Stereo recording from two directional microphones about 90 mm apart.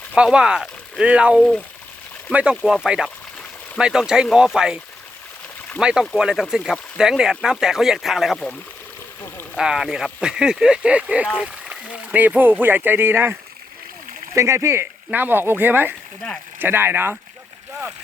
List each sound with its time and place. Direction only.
0.3 s speech: 10° right (ahead or behind)
5.8 s speech: 10° right (ahead or behind)
9.6 s speech: 5° right (ahead or behind); by 13.3 s 25° right (ahead or behind)
14.3 s speech: 30° right (ahead or behind)